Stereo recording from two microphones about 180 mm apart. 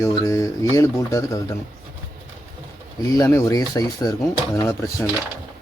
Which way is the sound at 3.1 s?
15° left (ahead or behind).